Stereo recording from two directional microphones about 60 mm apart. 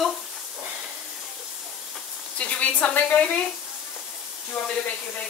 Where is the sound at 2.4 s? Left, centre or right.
Left.